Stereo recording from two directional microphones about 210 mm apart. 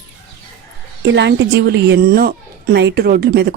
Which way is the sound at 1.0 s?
55° right (ahead or behind).